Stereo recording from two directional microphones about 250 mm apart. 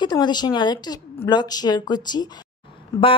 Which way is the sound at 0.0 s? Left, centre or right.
Centre.